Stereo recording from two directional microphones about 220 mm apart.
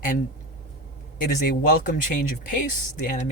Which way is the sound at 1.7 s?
35° left (ahead or behind).